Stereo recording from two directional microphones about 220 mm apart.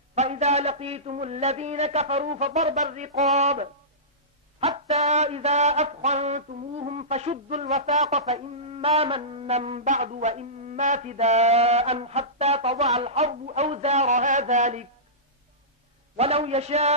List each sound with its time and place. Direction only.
0.1 s mantra: 30° right (ahead or behind)
3.3 s speech: 30° right (ahead or behind)
4.6 s mantra: 30° right (ahead or behind)
16.2 s mantra: 25° right (ahead or behind)